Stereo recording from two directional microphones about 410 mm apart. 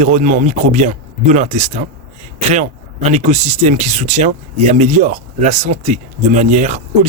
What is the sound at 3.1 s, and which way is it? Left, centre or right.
Speech, centre.